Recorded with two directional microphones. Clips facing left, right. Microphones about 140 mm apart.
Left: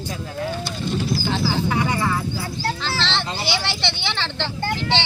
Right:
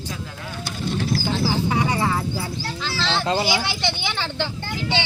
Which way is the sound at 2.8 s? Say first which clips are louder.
Even; 10° right (ahead or behind).